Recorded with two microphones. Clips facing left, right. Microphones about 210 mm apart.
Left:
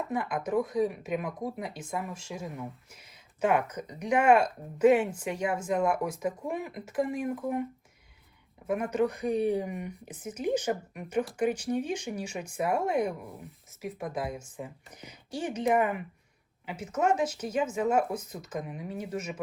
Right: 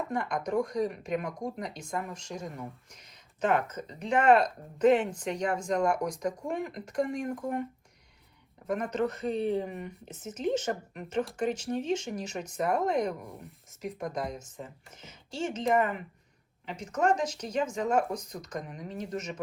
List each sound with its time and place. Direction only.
0.1 s speech: 5° left (ahead or behind)
8.6 s speech: 10° left (ahead or behind)